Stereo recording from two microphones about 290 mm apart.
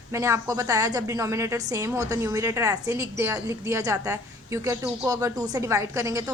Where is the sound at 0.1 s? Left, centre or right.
Centre.